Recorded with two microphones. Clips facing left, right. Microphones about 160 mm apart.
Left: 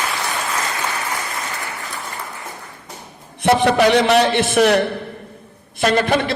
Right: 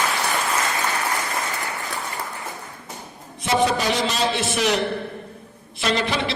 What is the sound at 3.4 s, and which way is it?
A man's voice, 65° left (ahead or behind).